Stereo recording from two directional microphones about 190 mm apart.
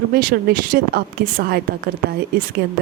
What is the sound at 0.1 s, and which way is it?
A woman's voice, 50° right (ahead or behind).